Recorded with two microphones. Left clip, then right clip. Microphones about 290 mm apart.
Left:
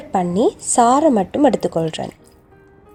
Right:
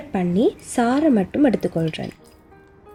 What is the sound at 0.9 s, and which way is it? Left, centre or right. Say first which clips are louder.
Speech: left 4 dB; left.